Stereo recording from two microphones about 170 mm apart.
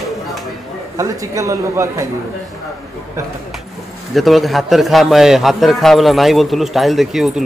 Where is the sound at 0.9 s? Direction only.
20° right (ahead or behind).